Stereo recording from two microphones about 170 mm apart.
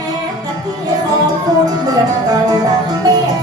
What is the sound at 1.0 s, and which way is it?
Music, 20° right (ahead or behind).